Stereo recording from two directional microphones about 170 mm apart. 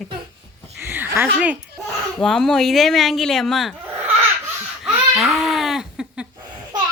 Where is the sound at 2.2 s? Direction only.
Centre (ahead or behind).